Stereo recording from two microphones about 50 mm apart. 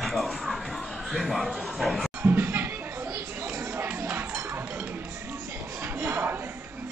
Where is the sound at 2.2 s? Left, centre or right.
Right.